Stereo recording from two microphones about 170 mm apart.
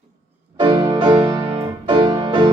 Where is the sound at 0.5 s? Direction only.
25° right (ahead or behind).